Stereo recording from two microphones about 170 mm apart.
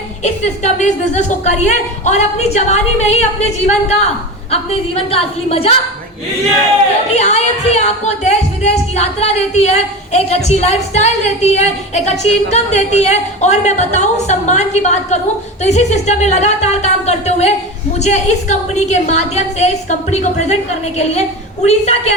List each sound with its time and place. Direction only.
0.2 s speech: 45° left (ahead or behind)
7.1 s speech: 40° left (ahead or behind)